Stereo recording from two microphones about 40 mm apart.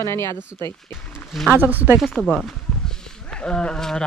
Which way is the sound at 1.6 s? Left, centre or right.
Right.